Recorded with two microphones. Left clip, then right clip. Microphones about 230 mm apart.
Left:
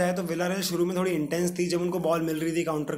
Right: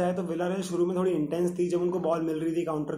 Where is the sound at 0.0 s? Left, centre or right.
Left.